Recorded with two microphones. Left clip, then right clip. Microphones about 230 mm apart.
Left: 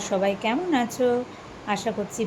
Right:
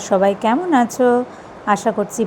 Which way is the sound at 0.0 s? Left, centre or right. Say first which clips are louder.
Right 9 dB; right.